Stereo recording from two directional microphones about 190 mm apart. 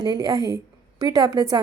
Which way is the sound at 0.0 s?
20° right (ahead or behind).